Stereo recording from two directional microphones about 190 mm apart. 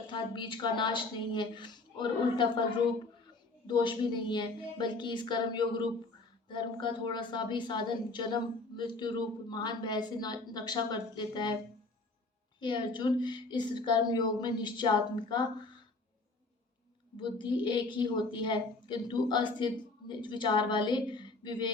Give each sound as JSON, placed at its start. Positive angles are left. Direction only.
{"t": 0.1, "sound": "a woman's voice", "side_deg": 25}
{"t": 3.7, "sound": "a woman's voice", "side_deg": 25}
{"t": 12.5, "sound": "a woman's voice", "side_deg": 25}
{"t": 17.2, "sound": "a woman's voice", "side_deg": 25}